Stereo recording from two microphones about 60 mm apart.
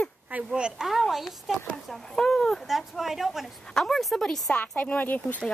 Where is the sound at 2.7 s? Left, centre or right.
Centre.